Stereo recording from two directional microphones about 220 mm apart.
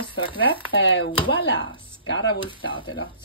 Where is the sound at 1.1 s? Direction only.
20° left (ahead or behind).